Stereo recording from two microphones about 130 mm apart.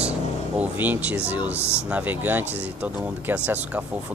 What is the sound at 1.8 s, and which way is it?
Speech, 10° right (ahead or behind).